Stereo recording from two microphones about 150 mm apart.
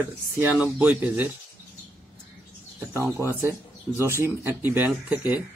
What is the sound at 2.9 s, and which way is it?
Speech, 20° right (ahead or behind).